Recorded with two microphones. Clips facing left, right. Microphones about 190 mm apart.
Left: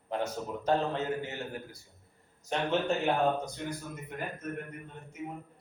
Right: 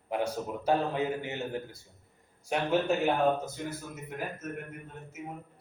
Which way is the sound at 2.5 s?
10° right (ahead or behind).